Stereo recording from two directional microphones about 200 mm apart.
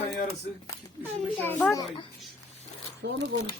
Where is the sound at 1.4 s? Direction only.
5° left (ahead or behind).